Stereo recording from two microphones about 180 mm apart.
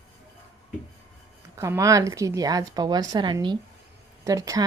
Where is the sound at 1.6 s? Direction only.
15° right (ahead or behind).